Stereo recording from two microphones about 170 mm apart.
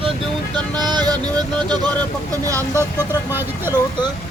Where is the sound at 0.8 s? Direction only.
25° right (ahead or behind).